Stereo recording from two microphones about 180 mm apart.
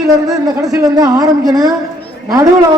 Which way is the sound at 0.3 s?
20° right (ahead or behind).